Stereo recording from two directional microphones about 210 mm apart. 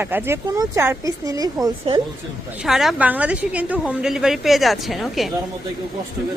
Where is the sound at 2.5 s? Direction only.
Centre (ahead or behind).